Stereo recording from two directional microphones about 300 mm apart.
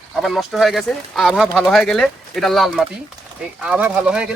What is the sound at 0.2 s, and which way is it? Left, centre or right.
Speech, centre.